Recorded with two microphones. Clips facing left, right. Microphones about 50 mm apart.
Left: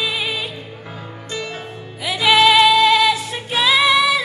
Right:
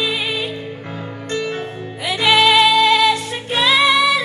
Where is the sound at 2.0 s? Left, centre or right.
Centre.